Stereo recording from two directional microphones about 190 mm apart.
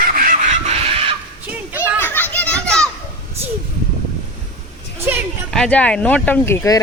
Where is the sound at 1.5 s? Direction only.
10° right (ahead or behind).